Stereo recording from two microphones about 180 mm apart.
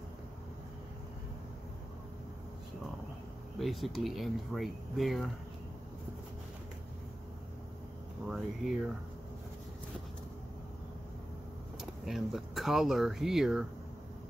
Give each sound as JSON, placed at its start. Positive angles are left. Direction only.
{"t": 3.5, "sound": "speech", "side_deg": 0}
{"t": 8.3, "sound": "speech", "side_deg": -5}
{"t": 11.8, "sound": "speech", "side_deg": 0}